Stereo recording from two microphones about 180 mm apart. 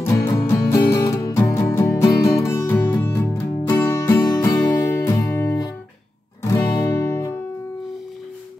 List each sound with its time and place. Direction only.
0.0 s music: 15° left (ahead or behind)